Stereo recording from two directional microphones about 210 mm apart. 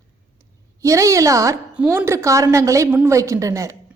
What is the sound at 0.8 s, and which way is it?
A woman's voice, 15° right (ahead or behind).